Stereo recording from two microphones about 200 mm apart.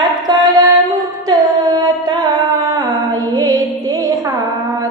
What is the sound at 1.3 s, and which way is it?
Carnatic music, 20° right (ahead or behind).